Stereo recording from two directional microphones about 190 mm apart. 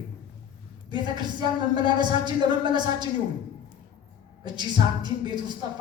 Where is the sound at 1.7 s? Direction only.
25° right (ahead or behind).